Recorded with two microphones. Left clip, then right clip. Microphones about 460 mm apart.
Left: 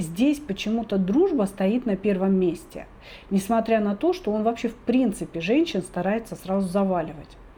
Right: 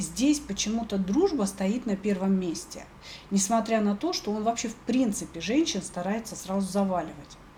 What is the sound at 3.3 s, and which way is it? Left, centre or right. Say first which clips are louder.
Speech: left 4 dB; left.